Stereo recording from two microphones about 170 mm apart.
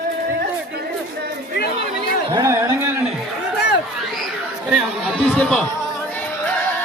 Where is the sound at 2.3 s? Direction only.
15° right (ahead or behind).